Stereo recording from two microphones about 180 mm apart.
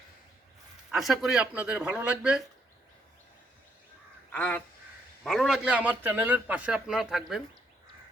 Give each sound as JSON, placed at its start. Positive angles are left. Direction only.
{"t": 0.9, "sound": "a man's voice", "side_deg": 0}
{"t": 4.3, "sound": "a man's voice", "side_deg": 10}